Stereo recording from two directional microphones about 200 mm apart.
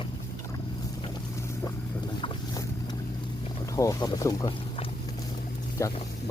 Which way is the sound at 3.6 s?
15° left (ahead or behind).